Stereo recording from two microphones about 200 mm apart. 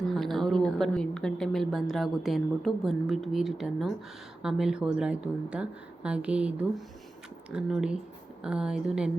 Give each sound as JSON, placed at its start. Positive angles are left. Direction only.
{"t": 0.1, "sound": "a woman's voice", "side_deg": 0}